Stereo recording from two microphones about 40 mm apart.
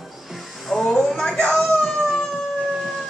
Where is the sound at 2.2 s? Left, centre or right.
Centre.